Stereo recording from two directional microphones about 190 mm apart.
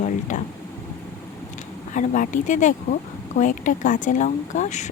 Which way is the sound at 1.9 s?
40° left (ahead or behind).